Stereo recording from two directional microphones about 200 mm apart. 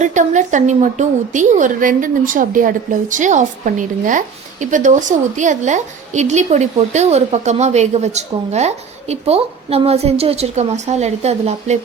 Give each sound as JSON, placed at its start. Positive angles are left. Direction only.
{"t": 0.0, "sound": "a woman's voice", "side_deg": -35}